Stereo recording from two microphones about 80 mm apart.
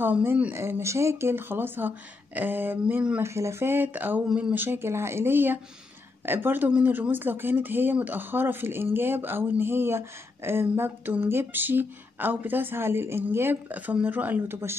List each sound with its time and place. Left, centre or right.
0.0 s speech: right
3.2 s speech: right